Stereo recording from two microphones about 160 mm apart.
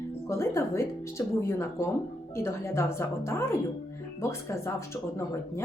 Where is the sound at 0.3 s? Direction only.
15° left (ahead or behind).